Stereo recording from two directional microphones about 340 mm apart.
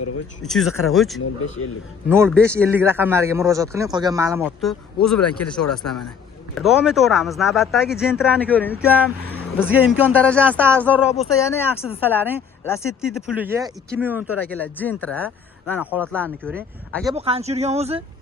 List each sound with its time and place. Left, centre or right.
0.4 s speech: centre
1.2 s a man's voice: left
2.0 s a man's voice: centre
12.6 s speech: centre
14.5 s speech: centre
17.1 s a man's voice: centre